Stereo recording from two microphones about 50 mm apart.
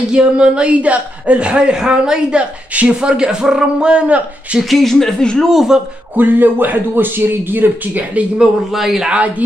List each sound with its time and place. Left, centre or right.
0.1 s a man's voice: centre
4.6 s speech: centre
5.4 s speech: centre
6.1 s speech: right
8.7 s speech: centre